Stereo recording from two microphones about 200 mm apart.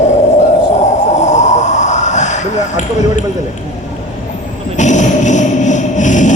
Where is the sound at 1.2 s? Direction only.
35° left (ahead or behind).